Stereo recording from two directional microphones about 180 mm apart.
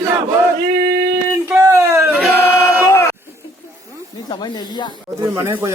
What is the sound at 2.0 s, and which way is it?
Choir, 5° right (ahead or behind).